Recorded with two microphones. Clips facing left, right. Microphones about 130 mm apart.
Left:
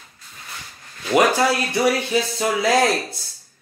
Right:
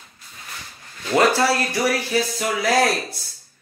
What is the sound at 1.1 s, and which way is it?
Speech, 15° left (ahead or behind).